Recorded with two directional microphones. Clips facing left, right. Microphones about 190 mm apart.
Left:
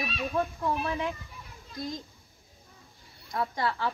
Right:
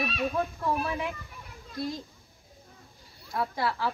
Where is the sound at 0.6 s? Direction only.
Centre (ahead or behind).